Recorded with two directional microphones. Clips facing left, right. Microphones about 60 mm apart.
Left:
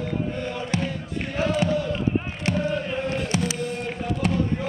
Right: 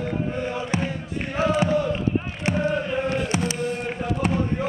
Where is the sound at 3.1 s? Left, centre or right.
Right.